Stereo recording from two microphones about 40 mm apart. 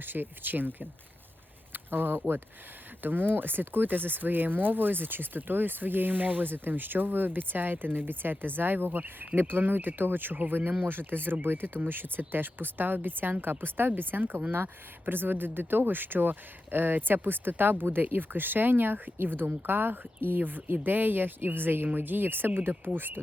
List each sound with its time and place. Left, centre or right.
0.0 s speech: right